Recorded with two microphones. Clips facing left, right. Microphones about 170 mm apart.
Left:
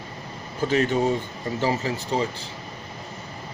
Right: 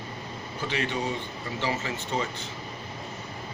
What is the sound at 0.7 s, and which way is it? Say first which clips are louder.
A man's voice: left 8 dB; 45° left (ahead or behind).